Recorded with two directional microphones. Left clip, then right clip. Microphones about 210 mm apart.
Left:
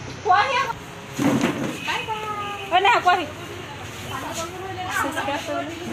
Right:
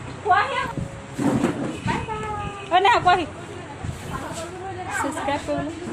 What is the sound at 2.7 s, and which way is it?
Vehicle, 25° right (ahead or behind).